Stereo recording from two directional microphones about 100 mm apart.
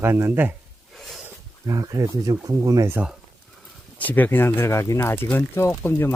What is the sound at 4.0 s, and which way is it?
Speech, 15° left (ahead or behind).